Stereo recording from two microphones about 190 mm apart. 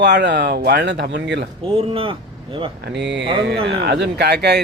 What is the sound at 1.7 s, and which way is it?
Speech, 30° right (ahead or behind).